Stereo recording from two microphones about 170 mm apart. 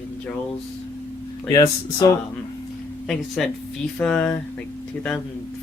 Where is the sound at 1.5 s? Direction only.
20° left (ahead or behind).